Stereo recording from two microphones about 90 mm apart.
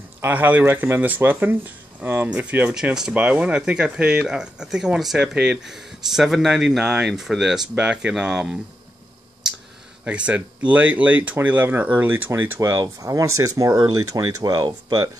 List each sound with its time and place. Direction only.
0.2 s speech: 20° right (ahead or behind)
10.0 s speech: 15° right (ahead or behind); by 15.0 s 45° right (ahead or behind)